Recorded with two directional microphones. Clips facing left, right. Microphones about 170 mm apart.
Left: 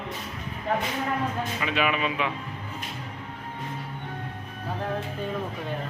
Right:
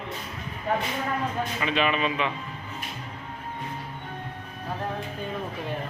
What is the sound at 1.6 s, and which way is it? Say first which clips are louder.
Speech: right 1 dB; 5° left (ahead or behind).